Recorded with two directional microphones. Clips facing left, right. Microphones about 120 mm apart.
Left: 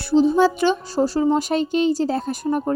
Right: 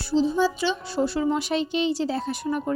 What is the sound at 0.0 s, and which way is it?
Speech, 55° left (ahead or behind).